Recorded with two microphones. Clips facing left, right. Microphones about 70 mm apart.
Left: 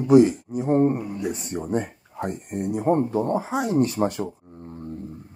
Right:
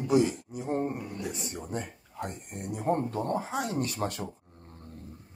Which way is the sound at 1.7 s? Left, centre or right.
Left.